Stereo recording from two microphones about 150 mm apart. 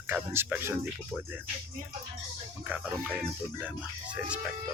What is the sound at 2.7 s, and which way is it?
Speech, 10° right (ahead or behind).